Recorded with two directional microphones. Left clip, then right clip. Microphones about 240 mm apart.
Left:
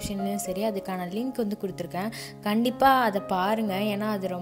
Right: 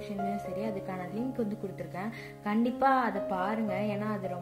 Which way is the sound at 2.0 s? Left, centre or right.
Left.